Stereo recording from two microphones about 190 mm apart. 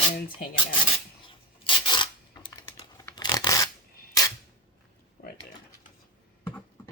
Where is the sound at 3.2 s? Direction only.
20° left (ahead or behind).